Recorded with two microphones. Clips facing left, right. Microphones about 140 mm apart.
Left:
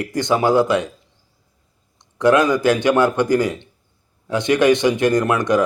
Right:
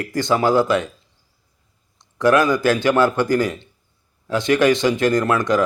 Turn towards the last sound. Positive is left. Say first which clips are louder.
# left 1 dB
turn(degrees=20)  # may be behind; listen again after turning